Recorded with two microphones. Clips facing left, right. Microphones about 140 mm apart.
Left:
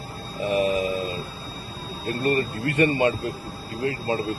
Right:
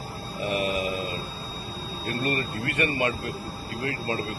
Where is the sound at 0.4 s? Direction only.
15° right (ahead or behind).